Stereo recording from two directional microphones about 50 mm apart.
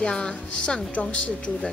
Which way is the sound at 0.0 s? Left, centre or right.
Centre.